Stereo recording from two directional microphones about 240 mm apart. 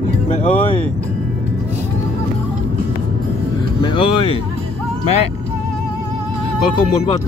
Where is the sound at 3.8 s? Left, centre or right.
Left.